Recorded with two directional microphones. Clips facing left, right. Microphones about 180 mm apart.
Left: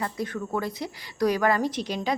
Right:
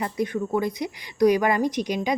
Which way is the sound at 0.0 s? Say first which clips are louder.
Right 4 dB; 20° right (ahead or behind).